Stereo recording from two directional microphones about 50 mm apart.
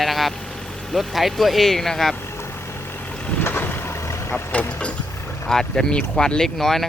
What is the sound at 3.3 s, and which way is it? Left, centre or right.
Vehicle, left.